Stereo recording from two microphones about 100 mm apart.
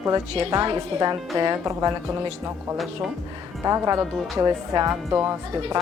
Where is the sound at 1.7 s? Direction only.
35° right (ahead or behind).